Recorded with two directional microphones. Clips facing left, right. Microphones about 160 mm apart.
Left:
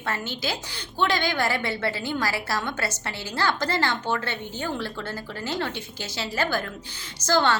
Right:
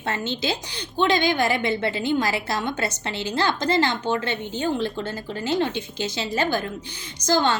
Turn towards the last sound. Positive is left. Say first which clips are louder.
# right 1 dB
turn(degrees=-15)  # may be behind; listen again after turning